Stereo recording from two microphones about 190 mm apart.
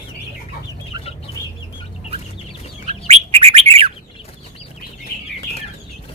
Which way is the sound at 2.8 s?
35° right (ahead or behind).